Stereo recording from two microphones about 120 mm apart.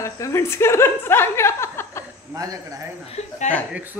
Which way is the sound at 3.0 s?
75° left (ahead or behind).